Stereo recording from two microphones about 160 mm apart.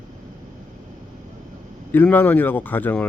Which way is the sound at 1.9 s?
10° left (ahead or behind).